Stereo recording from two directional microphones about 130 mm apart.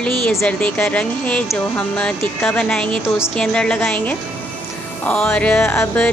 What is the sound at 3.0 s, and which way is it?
Speech, 20° left (ahead or behind).